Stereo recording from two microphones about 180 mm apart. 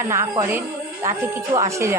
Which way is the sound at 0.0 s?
15° right (ahead or behind).